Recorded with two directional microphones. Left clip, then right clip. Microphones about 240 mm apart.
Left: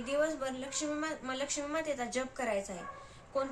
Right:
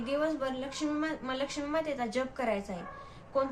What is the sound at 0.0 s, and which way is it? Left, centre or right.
A woman's voice, centre.